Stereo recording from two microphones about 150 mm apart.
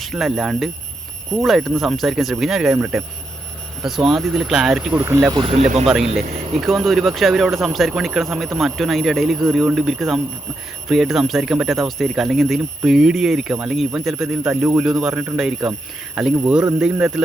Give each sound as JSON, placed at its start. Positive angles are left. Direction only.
{"t": 0.0, "sound": "speech", "side_deg": 0}
{"t": 5.0, "sound": "speech", "side_deg": -15}
{"t": 5.3, "sound": "speech", "side_deg": -35}
{"t": 5.8, "sound": "speech", "side_deg": 0}